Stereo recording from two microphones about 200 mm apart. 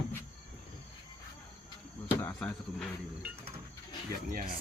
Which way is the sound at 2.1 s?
10° left (ahead or behind).